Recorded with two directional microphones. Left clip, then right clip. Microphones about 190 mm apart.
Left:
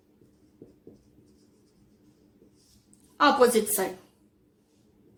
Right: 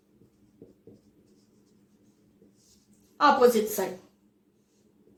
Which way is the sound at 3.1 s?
35° left (ahead or behind).